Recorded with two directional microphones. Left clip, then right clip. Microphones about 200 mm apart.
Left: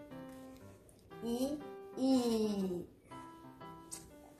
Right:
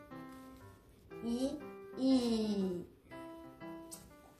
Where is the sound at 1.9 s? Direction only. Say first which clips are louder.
Even; 25° left (ahead or behind).